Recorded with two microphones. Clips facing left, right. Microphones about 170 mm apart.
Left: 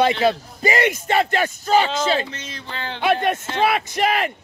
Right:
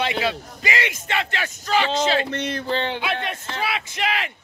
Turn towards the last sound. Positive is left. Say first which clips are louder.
# left 6 dB
turn(degrees=45)  # may be behind; listen again after turning